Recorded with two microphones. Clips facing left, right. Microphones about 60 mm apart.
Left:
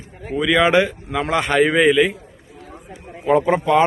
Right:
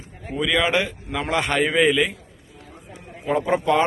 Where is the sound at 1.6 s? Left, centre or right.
Left.